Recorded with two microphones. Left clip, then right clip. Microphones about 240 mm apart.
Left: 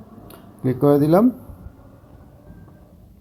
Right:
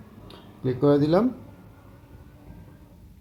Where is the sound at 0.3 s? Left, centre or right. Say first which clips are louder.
Left 4 dB; centre.